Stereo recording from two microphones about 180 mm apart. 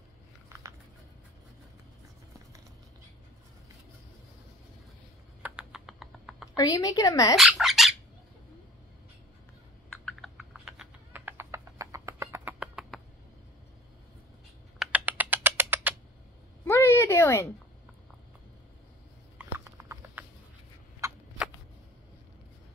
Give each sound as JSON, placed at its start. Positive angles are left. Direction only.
{"t": 5.4, "sound": "typing", "side_deg": -5}
{"t": 6.5, "sound": "speech", "side_deg": 20}
{"t": 7.3, "sound": "squawk", "side_deg": 0}
{"t": 9.8, "sound": "typing", "side_deg": 5}
{"t": 14.8, "sound": "typing", "side_deg": -10}
{"t": 16.6, "sound": "a sound", "side_deg": 15}
{"t": 19.6, "sound": "a sound", "side_deg": -15}